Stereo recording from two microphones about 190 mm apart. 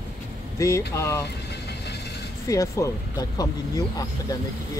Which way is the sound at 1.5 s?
60° left (ahead or behind).